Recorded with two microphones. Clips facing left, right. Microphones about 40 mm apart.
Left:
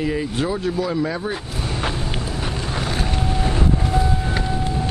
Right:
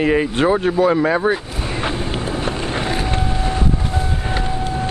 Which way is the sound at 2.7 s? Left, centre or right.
Right.